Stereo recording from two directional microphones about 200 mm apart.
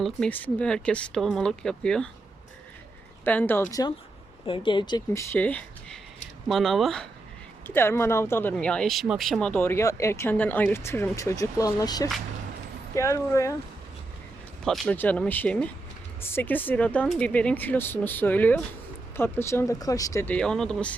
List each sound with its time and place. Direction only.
0.0 s speech: 5° left (ahead or behind)
3.2 s speech: 10° left (ahead or behind)
14.6 s speech: 5° left (ahead or behind)